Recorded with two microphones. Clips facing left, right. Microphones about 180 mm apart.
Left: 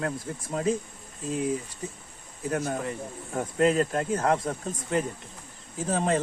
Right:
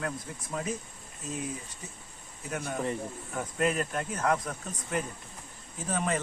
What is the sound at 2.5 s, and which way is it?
Speech, 35° left (ahead or behind).